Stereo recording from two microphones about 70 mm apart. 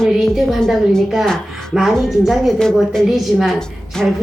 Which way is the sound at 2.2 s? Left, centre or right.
Centre.